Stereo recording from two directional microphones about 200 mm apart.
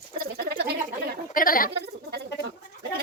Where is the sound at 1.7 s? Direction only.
55° right (ahead or behind).